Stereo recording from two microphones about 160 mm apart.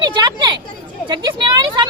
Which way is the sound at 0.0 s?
30° right (ahead or behind).